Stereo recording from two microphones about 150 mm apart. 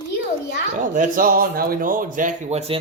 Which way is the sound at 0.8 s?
60° right (ahead or behind).